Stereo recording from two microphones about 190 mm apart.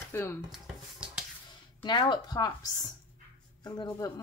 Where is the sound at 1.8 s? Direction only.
25° left (ahead or behind).